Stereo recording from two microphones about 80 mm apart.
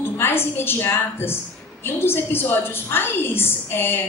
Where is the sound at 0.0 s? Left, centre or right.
Left.